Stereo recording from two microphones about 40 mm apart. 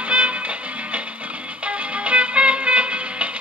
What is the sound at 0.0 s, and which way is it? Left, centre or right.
Music, right.